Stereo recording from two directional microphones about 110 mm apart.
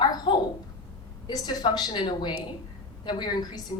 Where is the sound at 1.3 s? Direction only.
40° left (ahead or behind).